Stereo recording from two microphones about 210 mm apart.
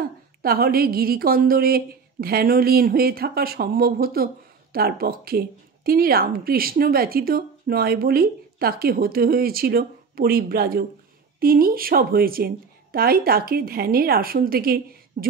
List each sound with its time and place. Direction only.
0.0 s speech: 45° right (ahead or behind)